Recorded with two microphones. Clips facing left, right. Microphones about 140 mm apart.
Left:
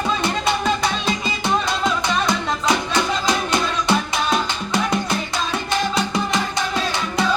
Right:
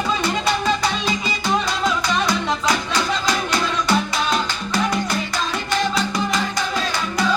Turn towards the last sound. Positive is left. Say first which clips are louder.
# left 1 dB
turn(degrees=25)  # may be behind; listen again after turning